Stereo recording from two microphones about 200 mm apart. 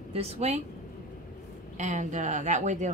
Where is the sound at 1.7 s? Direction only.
35° right (ahead or behind).